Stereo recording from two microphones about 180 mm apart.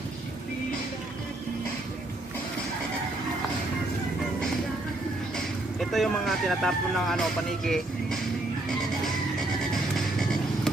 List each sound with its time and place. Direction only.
5.8 s speech: centre (ahead or behind)